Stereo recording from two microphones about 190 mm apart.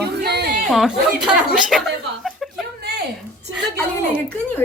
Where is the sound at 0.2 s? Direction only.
55° right (ahead or behind).